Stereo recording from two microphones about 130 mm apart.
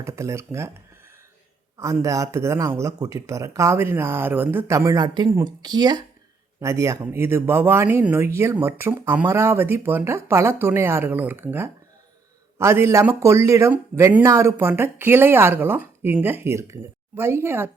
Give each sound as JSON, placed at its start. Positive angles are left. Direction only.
{"t": 0.0, "sound": "speech", "side_deg": -20}
{"t": 1.8, "sound": "speech", "side_deg": -25}